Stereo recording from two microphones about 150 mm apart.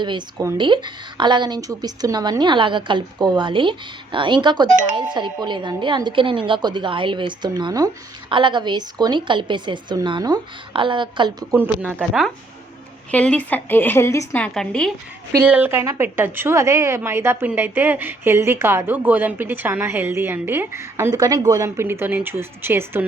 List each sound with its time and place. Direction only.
0.0 s speech: 30° right (ahead or behind)
11.5 s a woman's voice: 15° right (ahead or behind)
13.1 s a woman's voice: 10° left (ahead or behind)
14.4 s a woman's voice: 5° left (ahead or behind)
15.4 s a woman's voice: 10° right (ahead or behind)